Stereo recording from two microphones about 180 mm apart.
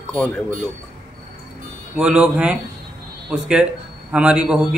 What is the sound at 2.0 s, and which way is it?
A man's voice, 5° right (ahead or behind).